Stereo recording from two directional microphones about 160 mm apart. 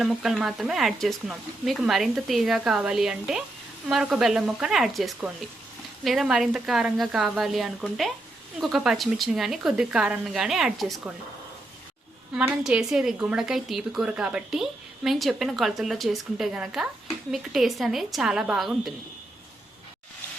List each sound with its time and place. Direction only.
0.0 s a woman's voice: 5° right (ahead or behind)
12.3 s a woman's voice: 5° right (ahead or behind)